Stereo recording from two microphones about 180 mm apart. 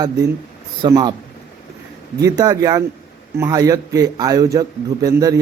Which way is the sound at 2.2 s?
20° right (ahead or behind).